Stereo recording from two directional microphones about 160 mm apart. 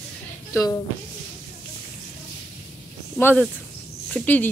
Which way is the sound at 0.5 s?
25° left (ahead or behind).